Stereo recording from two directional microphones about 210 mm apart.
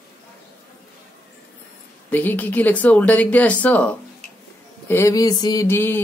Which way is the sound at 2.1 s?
10° left (ahead or behind).